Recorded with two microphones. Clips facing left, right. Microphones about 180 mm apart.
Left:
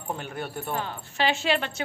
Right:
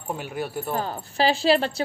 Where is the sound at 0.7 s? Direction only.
40° right (ahead or behind).